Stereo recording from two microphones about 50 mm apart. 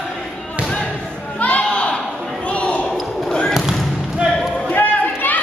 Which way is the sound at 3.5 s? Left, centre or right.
Centre.